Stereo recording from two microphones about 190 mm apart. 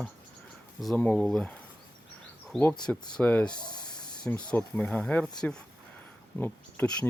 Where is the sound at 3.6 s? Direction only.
20° left (ahead or behind).